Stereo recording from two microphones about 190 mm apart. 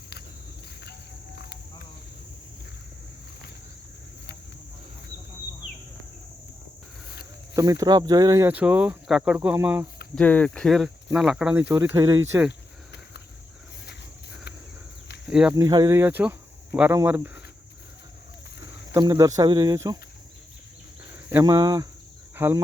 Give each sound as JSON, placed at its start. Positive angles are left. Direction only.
{"t": 7.5, "sound": "speech", "side_deg": -20}
{"t": 10.2, "sound": "speech", "side_deg": 5}
{"t": 12.5, "sound": "cricket", "side_deg": 65}
{"t": 15.3, "sound": "speech", "side_deg": -5}
{"t": 15.5, "sound": "speech", "side_deg": -20}
{"t": 18.9, "sound": "speech", "side_deg": -20}
{"t": 21.1, "sound": "speech", "side_deg": -15}